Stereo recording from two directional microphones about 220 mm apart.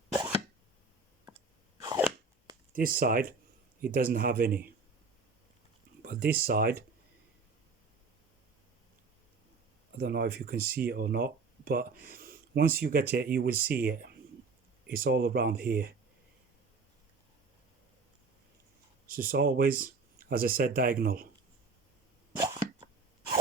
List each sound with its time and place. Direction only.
1.8 s a sound: 15° right (ahead or behind)
2.7 s speech: 40° right (ahead or behind)
6.0 s speech: 40° right (ahead or behind)
10.0 s speech: 45° right (ahead or behind)
13.5 s speech: 10° right (ahead or behind)
13.8 s speech: 40° right (ahead or behind)
19.0 s speech: 40° right (ahead or behind)